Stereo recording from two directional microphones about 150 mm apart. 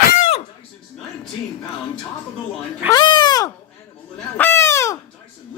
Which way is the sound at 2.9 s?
30° left (ahead or behind).